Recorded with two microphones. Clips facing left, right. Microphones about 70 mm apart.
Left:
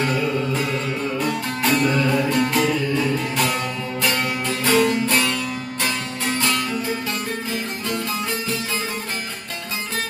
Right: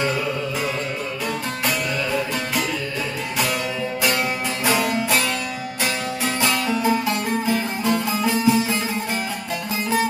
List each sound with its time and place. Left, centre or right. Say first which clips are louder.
1.6 s music: left 6 dB; centre
4.6 s music: left 3 dB; centre